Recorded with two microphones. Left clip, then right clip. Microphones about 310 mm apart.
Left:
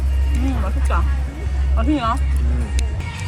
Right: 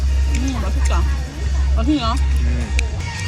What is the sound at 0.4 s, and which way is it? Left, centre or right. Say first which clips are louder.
Music: left 1 dB; centre.